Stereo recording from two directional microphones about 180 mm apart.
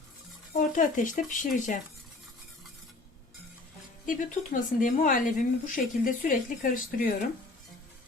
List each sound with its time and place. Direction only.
0.5 s speech: 45° left (ahead or behind)
4.0 s speech: 50° left (ahead or behind)